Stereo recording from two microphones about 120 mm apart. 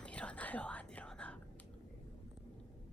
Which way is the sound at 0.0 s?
10° left (ahead or behind).